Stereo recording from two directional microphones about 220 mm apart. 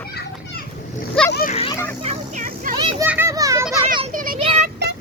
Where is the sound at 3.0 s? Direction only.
10° right (ahead or behind).